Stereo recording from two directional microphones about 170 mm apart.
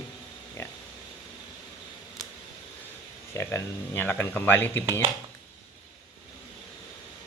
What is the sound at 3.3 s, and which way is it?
Speech, 15° left (ahead or behind).